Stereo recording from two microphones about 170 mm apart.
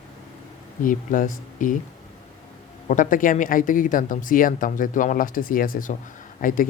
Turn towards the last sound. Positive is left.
turn(degrees=55)  # may be behind; listen again after turning